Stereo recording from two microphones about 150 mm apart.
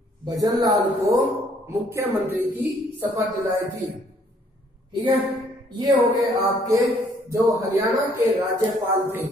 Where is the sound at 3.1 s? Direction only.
25° right (ahead or behind).